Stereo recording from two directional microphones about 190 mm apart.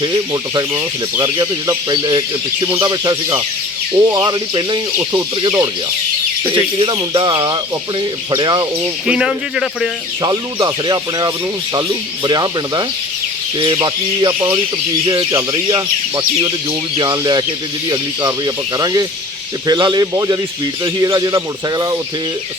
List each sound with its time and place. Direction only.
0.0 s speech: 20° right (ahead or behind)
9.0 s speech: 5° right (ahead or behind)
10.2 s speech: 20° right (ahead or behind)